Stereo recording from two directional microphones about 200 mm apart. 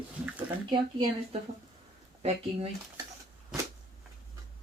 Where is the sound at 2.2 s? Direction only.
30° right (ahead or behind).